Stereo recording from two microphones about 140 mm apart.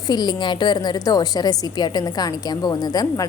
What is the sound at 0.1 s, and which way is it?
A woman's voice, 30° left (ahead or behind).